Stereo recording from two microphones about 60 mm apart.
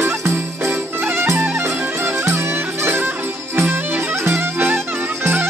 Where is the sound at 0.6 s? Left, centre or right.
Right.